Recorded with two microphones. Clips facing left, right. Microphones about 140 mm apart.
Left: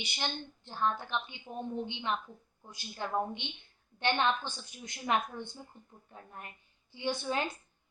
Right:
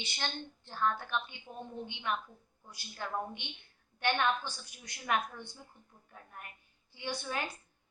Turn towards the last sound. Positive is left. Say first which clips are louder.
# left 5 dB
turn(degrees=20)  # may be behind; listen again after turning